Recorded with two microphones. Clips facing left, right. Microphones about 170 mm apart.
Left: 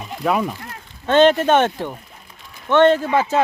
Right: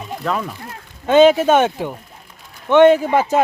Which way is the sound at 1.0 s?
10° right (ahead or behind).